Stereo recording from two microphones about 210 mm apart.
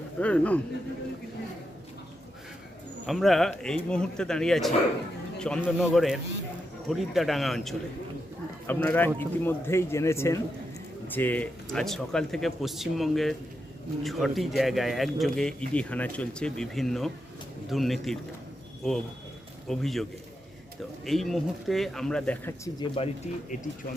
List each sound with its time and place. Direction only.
0.2 s speech: 5° left (ahead or behind)
3.1 s speech: centre (ahead or behind)
23.0 s speech: 30° left (ahead or behind)